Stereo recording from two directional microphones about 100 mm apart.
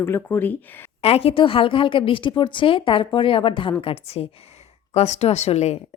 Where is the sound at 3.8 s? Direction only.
85° left.